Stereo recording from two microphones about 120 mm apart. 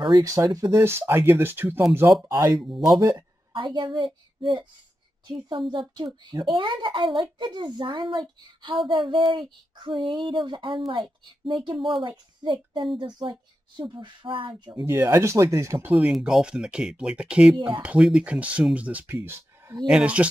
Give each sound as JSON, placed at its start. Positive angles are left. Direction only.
{"t": 0.1, "sound": "speech", "side_deg": -25}
{"t": 2.2, "sound": "speech", "side_deg": -30}
{"t": 3.5, "sound": "a child's voice", "side_deg": -45}
{"t": 8.8, "sound": "a sound", "side_deg": -45}
{"t": 12.0, "sound": "a child's voice", "side_deg": -45}
{"t": 14.9, "sound": "speech", "side_deg": -25}
{"t": 16.1, "sound": "speech", "side_deg": -5}